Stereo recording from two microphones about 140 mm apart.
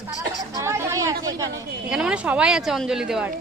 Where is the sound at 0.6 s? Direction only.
20° right (ahead or behind).